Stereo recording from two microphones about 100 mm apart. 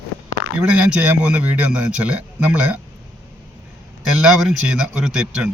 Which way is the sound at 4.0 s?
5° right (ahead or behind).